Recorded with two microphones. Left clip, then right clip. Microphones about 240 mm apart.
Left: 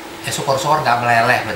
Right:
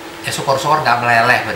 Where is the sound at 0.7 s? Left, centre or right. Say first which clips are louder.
Right 1 dB; centre.